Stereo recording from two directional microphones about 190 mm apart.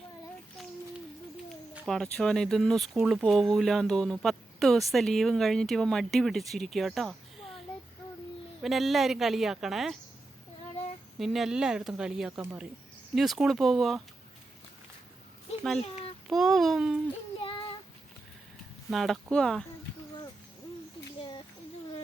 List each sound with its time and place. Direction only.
1.7 s speech: 5° right (ahead or behind)
8.6 s speech: centre (ahead or behind)
11.2 s speech: centre (ahead or behind)
16.2 s speech: centre (ahead or behind)
17.4 s child singing: 25° left (ahead or behind)
18.9 s speech: centre (ahead or behind)
21.2 s a sound: 25° left (ahead or behind)